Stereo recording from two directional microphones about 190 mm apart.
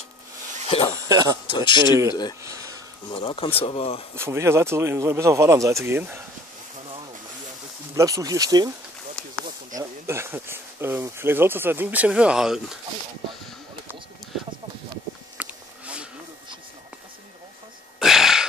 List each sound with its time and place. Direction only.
0.7 s speech: 25° left (ahead or behind)
1.0 s speech: 20° right (ahead or behind)
1.5 s speech: 25° left (ahead or behind)
3.1 s speech: 25° left (ahead or behind)
4.1 s speech: 15° right (ahead or behind)
7.9 s speech: 15° right (ahead or behind)
9.2 s a sound: 5° left (ahead or behind)
9.8 s speech: 15° right (ahead or behind)
15.3 s a sound: 5° right (ahead or behind)
17.9 s a sound: centre (ahead or behind)